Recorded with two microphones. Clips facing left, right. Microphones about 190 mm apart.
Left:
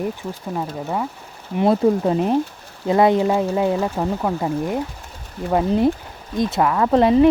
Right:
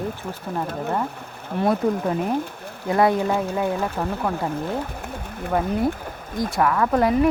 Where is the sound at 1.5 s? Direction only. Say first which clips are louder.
Left 4 dB; 25° left (ahead or behind).